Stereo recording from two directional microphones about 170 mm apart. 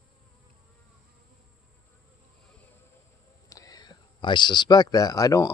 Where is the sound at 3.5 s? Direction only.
20° left (ahead or behind).